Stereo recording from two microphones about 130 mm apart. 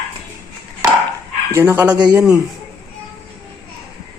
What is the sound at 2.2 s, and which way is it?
Speech, 5° right (ahead or behind).